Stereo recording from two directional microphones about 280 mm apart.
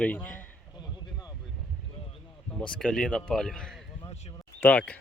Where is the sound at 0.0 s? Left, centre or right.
Centre.